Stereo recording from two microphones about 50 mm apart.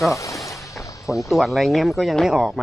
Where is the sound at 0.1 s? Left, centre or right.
Left.